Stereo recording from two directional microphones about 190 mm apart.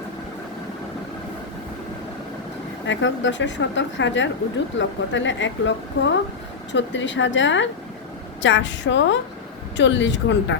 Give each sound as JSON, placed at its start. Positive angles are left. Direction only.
{"t": 2.8, "sound": "a woman's voice", "side_deg": 75}